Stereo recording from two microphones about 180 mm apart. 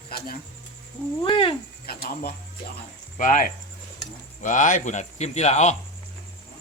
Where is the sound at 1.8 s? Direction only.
55° left (ahead or behind).